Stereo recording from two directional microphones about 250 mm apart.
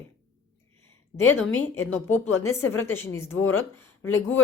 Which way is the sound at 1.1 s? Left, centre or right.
Centre.